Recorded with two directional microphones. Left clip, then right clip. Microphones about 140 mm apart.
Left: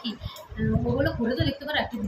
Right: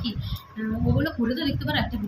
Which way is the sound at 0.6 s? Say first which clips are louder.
Left 2 dB; 10° left (ahead or behind).